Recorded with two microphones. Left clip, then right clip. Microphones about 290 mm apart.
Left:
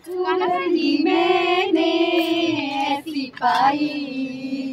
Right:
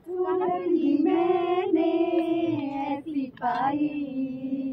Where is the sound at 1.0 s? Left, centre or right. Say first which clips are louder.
Left 5 dB; centre.